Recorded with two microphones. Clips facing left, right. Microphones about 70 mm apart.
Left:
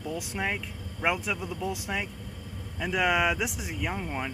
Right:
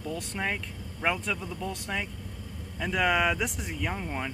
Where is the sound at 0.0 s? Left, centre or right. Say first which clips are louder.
Left 1 dB; centre.